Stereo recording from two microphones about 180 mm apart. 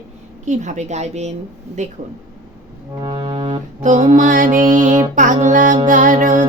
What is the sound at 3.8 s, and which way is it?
A woman's voice, 45° right (ahead or behind).